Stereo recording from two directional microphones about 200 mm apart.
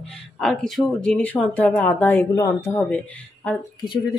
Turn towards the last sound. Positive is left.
turn(degrees=25)  # may be behind; listen again after turning